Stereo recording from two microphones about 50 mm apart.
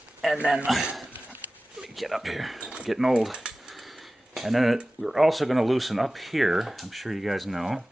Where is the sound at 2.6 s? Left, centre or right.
Centre.